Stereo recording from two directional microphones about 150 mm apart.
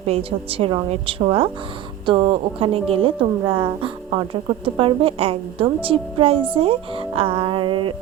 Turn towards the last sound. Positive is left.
turn(degrees=-35)  # may be behind; listen again after turning